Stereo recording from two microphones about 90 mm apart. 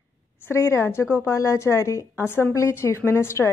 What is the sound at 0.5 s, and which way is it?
A woman's voice, 30° left (ahead or behind).